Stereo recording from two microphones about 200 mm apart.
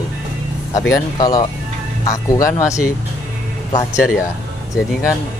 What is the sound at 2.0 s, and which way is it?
Speech, 15° left (ahead or behind).